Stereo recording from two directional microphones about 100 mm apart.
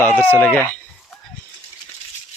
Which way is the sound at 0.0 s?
20° left (ahead or behind).